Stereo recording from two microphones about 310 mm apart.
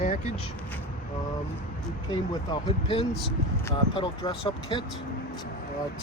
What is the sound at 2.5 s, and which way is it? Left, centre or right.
Speech, centre.